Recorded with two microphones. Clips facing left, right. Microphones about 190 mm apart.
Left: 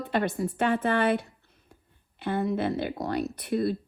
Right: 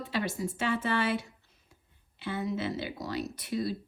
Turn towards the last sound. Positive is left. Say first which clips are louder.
# left 5 dB
turn(degrees=55)  # may be behind; listen again after turning